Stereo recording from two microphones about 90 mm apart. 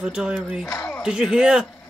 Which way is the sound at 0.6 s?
30° left (ahead or behind).